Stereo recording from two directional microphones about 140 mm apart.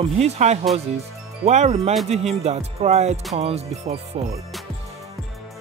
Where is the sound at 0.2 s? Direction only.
50° right (ahead or behind).